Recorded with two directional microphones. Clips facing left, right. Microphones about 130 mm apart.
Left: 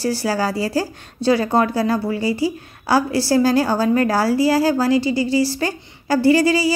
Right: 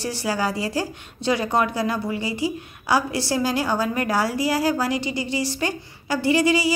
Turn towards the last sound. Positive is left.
turn(degrees=35)  # may be behind; listen again after turning